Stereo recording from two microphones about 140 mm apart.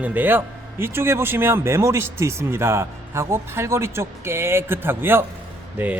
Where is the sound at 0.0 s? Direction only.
10° right (ahead or behind).